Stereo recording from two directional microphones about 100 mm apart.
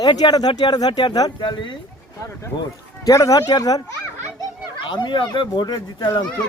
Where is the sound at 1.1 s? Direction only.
40° left (ahead or behind).